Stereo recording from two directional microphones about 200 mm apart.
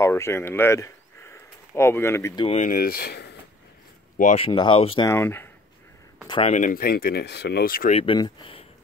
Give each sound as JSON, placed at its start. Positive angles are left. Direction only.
{"t": 0.0, "sound": "speech", "side_deg": 15}
{"t": 2.4, "sound": "speech", "side_deg": 35}
{"t": 4.4, "sound": "speech", "side_deg": 25}
{"t": 5.1, "sound": "speech", "side_deg": 10}
{"t": 6.2, "sound": "speech", "side_deg": 25}
{"t": 6.5, "sound": "speech", "side_deg": 40}
{"t": 7.9, "sound": "speech", "side_deg": 25}